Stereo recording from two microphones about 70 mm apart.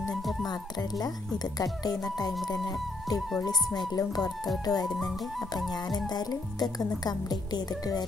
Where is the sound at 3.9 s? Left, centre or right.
Left.